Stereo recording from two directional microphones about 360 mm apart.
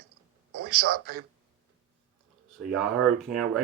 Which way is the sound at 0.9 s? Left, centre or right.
Right.